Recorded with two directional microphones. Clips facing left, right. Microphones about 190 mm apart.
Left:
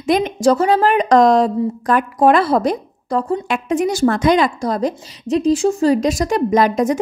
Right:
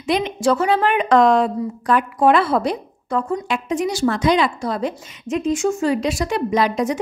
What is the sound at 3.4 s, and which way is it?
A woman's voice, 55° left (ahead or behind).